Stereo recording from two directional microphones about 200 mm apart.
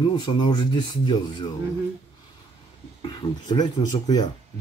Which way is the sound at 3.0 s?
20° left (ahead or behind).